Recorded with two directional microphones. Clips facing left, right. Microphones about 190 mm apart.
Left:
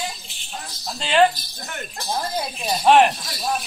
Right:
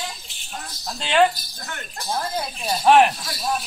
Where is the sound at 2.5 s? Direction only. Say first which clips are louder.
Even; centre (ahead or behind).